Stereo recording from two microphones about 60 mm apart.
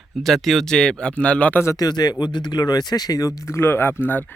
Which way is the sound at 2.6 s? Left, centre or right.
Left.